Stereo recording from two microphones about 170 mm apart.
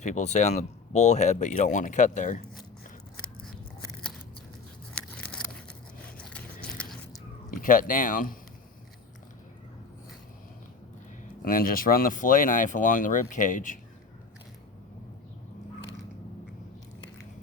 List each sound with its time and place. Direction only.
0.0 s speech: 45° left (ahead or behind)
4.9 s biting: 5° left (ahead or behind)
7.6 s speech: 55° left (ahead or behind)
11.4 s speech: 55° left (ahead or behind)